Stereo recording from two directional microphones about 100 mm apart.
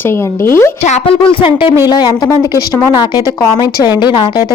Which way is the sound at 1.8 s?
40° left (ahead or behind).